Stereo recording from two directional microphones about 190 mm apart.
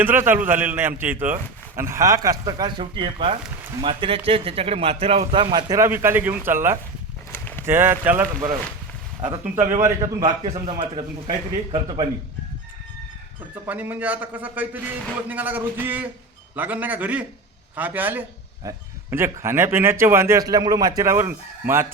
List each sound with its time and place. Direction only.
0.0 s a man's voice: 10° right (ahead or behind)
7.3 s a sound: 10° left (ahead or behind)
7.6 s a man's voice: 10° right (ahead or behind)
9.8 s a man's voice: 20° right (ahead or behind)
13.7 s a man's voice: 10° right (ahead or behind)